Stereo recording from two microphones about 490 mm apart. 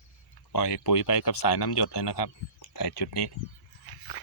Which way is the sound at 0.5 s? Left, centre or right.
Left.